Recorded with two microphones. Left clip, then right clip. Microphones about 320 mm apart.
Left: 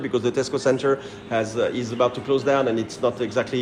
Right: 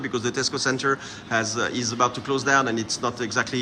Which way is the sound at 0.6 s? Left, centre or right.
Centre.